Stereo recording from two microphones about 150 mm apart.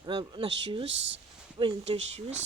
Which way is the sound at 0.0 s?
35° right (ahead or behind).